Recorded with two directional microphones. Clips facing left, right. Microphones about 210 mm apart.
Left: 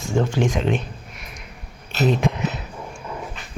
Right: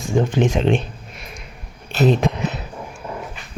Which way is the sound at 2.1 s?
35° right (ahead or behind).